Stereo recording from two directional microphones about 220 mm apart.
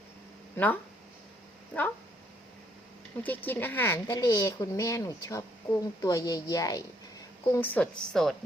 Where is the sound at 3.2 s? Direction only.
10° left (ahead or behind).